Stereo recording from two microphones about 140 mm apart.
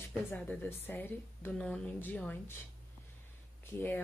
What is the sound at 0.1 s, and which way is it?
Speech, 10° left (ahead or behind).